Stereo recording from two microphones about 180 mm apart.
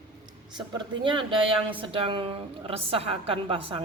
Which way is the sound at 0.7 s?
25° right (ahead or behind).